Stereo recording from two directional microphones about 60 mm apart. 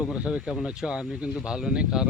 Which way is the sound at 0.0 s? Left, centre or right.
Centre.